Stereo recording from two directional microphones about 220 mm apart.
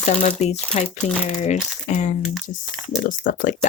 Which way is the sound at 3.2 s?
35° left (ahead or behind).